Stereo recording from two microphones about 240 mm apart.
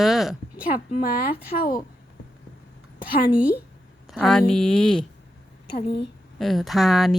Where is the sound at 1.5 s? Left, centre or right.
Left.